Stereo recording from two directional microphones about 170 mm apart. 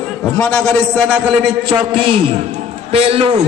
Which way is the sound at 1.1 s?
10° right (ahead or behind).